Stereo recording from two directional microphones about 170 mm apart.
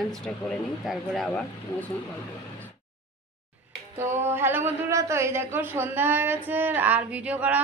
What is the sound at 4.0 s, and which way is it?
A man's voice, 15° right (ahead or behind).